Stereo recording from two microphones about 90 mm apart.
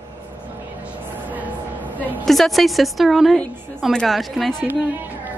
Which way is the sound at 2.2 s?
Centre (ahead or behind).